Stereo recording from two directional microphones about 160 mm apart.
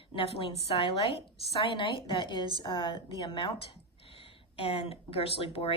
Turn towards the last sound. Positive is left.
turn(degrees=35)  # may be behind; listen again after turning